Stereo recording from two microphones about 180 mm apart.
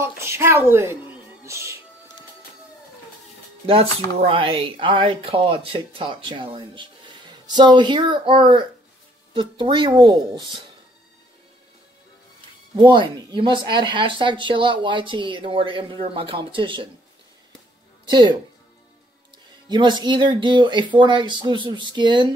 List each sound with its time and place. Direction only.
0.0 s a sound: 15° right (ahead or behind)
1.4 s music: 15° right (ahead or behind)
3.6 s speech: 30° right (ahead or behind)
12.7 s speech: 25° right (ahead or behind)
18.0 s speech: 25° right (ahead or behind)
19.7 s speech: 25° right (ahead or behind)